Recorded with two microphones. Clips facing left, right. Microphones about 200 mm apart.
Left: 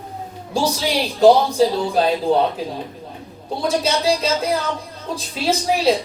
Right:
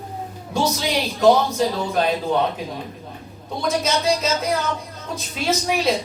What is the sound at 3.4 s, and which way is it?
Speech, 30° left (ahead or behind).